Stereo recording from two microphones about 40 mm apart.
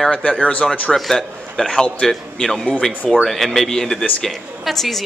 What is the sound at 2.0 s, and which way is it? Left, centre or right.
A woman's voice, centre.